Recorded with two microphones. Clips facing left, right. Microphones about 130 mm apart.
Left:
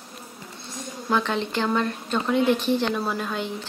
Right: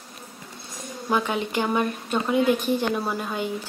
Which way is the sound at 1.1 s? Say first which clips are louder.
Even; 10° right (ahead or behind).